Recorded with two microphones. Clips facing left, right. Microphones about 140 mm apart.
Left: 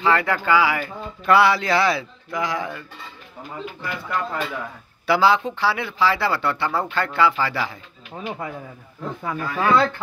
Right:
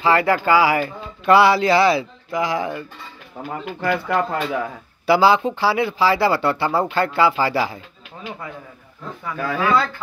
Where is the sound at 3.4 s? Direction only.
75° right (ahead or behind).